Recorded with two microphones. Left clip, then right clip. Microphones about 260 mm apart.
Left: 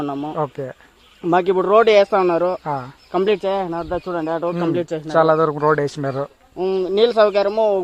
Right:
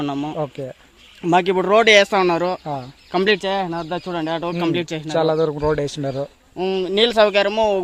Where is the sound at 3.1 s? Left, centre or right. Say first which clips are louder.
Even; right.